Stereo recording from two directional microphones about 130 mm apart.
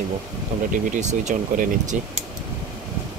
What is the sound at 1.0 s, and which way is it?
Speech, 65° right (ahead or behind).